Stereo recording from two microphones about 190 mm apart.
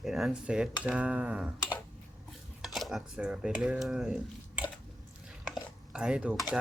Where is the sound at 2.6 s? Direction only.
Centre (ahead or behind).